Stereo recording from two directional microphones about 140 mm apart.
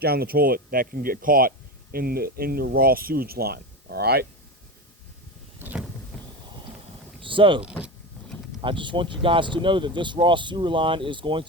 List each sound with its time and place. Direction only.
0.1 s speech: 90° right
5.5 s vehicle: 15° right (ahead or behind)
6.1 s clip-clop: 5° left (ahead or behind)
7.2 s speech: 35° right (ahead or behind)
7.6 s speech: 10° right (ahead or behind)
8.6 s speech: 35° right (ahead or behind)